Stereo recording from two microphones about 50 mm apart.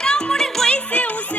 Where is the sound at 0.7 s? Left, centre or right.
Left.